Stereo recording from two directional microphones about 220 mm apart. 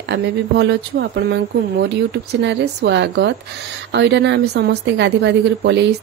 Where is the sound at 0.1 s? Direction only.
50° right (ahead or behind).